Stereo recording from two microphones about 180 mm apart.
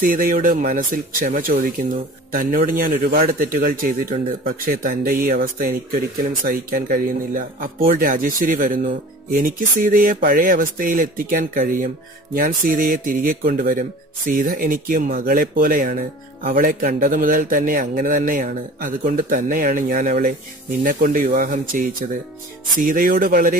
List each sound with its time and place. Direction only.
0.0 s speech: 50° right (ahead or behind)
4.6 s speech: 55° right (ahead or behind)